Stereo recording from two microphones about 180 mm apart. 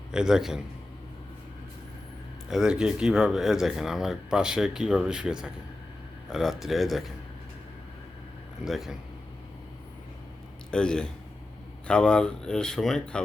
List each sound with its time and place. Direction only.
0.1 s speech: 5° right (ahead or behind)
2.5 s speech: 5° right (ahead or behind)
8.6 s speech: centre (ahead or behind)
10.7 s speech: 5° left (ahead or behind)